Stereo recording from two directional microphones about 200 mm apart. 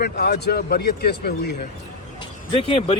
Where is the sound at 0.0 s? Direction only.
55° left (ahead or behind).